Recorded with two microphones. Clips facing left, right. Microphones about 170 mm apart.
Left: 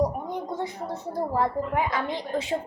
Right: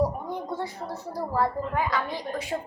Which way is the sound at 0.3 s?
20° left (ahead or behind).